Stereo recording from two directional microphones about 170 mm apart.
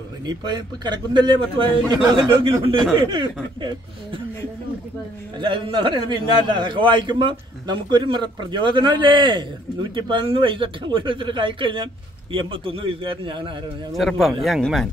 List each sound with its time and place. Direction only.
0.3 s a man's voice: 25° right (ahead or behind)
5.4 s a man's voice: 30° right (ahead or behind)
13.9 s speech: centre (ahead or behind)